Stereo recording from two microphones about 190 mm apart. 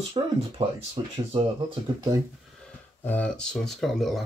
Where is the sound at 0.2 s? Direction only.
25° right (ahead or behind).